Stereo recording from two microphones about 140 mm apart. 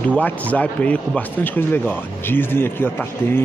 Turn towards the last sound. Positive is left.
turn(degrees=15)  # may be behind; listen again after turning